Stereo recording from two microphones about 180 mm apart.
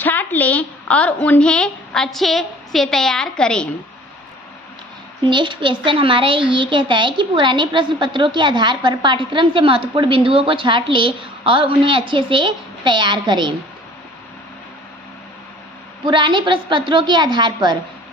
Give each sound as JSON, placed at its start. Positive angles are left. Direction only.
{"t": 0.0, "sound": "a woman's voice", "side_deg": 10}
{"t": 5.2, "sound": "a woman's voice", "side_deg": -25}
{"t": 16.1, "sound": "a woman's voice", "side_deg": -25}